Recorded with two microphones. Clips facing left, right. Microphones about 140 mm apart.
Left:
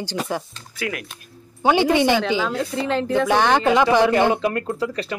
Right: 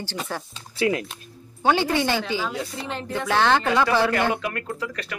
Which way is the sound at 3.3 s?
15° left (ahead or behind).